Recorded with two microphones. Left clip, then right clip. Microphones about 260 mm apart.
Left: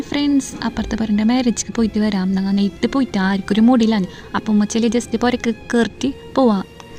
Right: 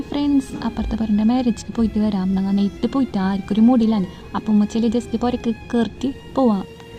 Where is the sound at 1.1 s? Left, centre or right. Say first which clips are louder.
Left 1 dB; left.